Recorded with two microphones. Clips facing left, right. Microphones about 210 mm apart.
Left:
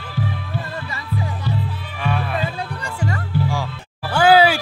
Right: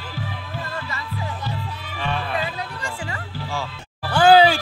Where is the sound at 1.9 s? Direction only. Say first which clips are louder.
Left 3 dB; 10° left (ahead or behind).